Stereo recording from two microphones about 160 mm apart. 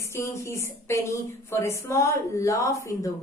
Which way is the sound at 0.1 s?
20° left (ahead or behind).